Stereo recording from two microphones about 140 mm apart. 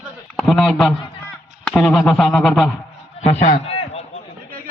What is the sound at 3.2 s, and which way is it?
Speech, 50° left (ahead or behind).